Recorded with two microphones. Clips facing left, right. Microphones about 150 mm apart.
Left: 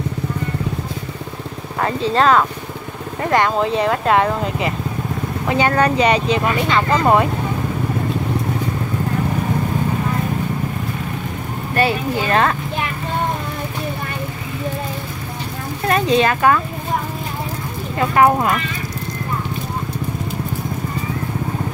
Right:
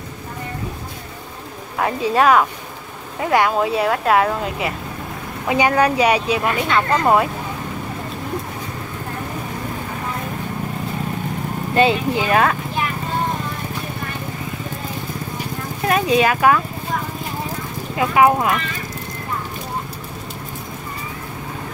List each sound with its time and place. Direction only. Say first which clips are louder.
1.8 s speech: even; 10° right (ahead or behind)
11.7 s speech: right 2 dB; 20° right (ahead or behind)
12.3 s speech: even; 5° right (ahead or behind)
15.9 s speech: left 1 dB; 10° right (ahead or behind)
17.9 s speech: left 1 dB; 5° right (ahead or behind)